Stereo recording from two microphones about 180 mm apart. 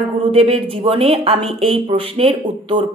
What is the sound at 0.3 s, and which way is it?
A woman's voice, 30° right (ahead or behind).